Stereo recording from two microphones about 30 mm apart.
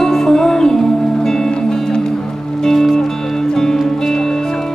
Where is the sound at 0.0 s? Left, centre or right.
Centre.